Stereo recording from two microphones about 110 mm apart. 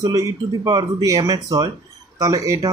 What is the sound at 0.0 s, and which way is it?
Speech, 30° right (ahead or behind).